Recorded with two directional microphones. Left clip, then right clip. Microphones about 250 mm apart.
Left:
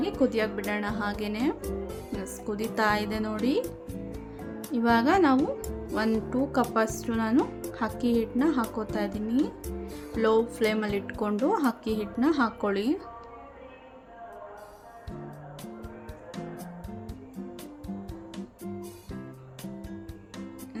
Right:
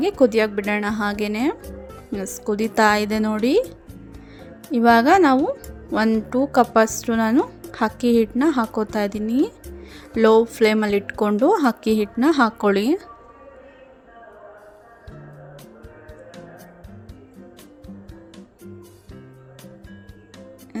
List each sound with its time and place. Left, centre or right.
0.2 s speech: right
4.7 s speech: right
18.3 s music: centre